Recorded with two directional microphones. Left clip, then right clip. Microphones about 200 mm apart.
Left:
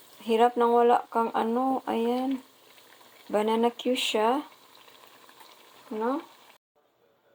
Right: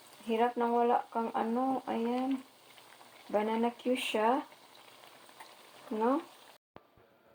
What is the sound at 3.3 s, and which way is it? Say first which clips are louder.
Speech: left 6 dB; 45° left (ahead or behind).